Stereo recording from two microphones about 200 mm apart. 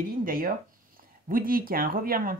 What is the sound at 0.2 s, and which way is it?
Speech, 45° right (ahead or behind).